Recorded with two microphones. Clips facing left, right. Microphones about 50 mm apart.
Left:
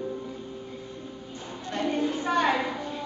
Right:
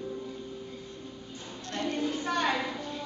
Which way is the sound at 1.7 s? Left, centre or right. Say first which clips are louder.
Left 4 dB; centre.